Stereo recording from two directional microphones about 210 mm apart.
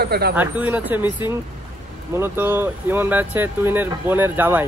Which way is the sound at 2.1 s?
10° right (ahead or behind).